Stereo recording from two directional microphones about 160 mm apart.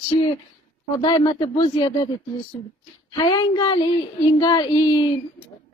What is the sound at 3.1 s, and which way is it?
Speech, 25° left (ahead or behind).